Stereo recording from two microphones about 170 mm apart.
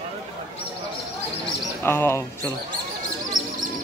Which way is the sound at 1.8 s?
15° left (ahead or behind).